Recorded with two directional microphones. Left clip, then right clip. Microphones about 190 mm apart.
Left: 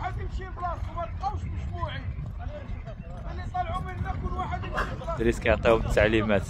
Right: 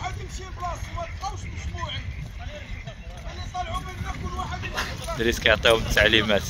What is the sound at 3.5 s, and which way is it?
Speech, 65° right (ahead or behind).